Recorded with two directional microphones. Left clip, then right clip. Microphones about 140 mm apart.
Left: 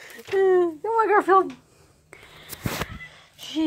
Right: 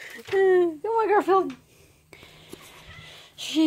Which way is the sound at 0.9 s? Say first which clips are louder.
Left 3 dB; 10° right (ahead or behind).